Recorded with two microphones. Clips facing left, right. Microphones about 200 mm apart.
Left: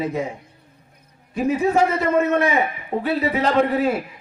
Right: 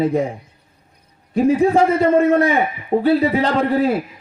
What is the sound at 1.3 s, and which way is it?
A man's voice, 30° right (ahead or behind).